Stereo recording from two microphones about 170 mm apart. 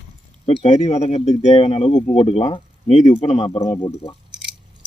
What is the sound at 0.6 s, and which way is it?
Speech, 45° left (ahead or behind).